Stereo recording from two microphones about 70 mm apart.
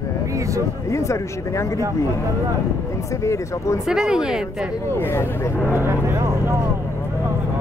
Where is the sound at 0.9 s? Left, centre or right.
Left.